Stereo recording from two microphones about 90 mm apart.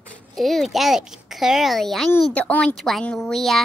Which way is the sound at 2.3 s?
15° left (ahead or behind).